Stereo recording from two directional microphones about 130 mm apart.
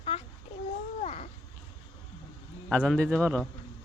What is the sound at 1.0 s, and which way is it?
Babbling, 55° left (ahead or behind).